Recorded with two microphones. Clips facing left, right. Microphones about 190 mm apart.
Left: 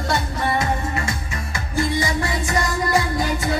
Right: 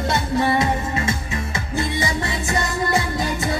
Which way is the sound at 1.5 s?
25° right (ahead or behind).